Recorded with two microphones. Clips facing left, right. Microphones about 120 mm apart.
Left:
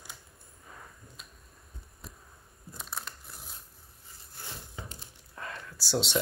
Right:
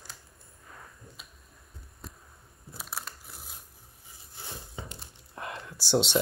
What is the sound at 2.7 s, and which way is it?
Crushing, 5° right (ahead or behind).